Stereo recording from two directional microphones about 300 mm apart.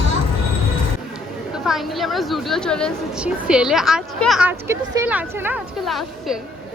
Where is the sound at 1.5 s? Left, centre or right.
Centre.